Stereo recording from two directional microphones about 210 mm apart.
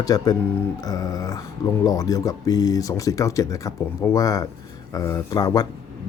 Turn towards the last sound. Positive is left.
turn(degrees=20)  # may be behind; listen again after turning